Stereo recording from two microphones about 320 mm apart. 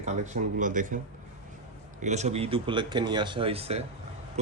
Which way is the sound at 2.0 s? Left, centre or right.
Right.